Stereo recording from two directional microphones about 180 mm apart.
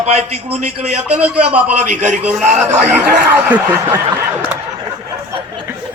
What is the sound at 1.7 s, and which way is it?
Speech, 40° right (ahead or behind).